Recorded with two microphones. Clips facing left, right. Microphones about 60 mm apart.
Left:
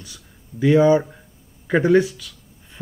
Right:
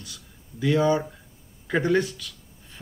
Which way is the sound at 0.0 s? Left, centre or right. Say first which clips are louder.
Left 1 dB; left.